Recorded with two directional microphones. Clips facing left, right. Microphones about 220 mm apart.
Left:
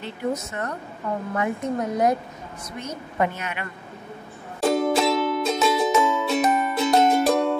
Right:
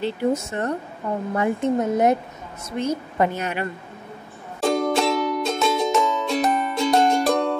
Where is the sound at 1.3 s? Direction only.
30° right (ahead or behind).